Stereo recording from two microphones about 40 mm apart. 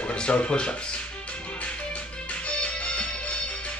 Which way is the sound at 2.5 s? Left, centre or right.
Left.